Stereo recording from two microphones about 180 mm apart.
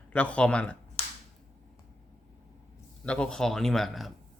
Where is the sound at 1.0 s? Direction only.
35° left (ahead or behind).